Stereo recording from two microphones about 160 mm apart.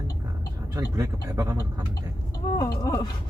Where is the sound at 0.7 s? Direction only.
15° right (ahead or behind).